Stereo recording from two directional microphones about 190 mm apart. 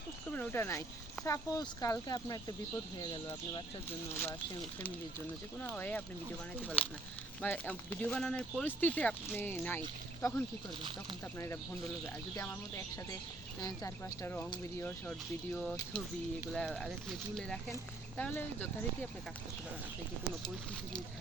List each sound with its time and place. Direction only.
0.3 s speech: 10° left (ahead or behind)
4.1 s speech: 10° left (ahead or behind)
5.7 s speech: 10° left (ahead or behind)